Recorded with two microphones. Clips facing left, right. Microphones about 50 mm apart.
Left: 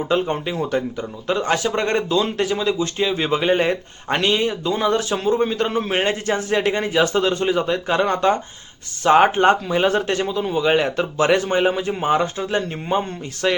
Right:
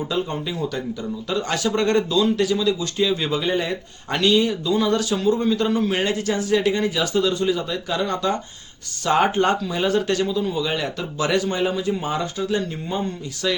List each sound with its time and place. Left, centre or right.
0.1 s a man's voice: left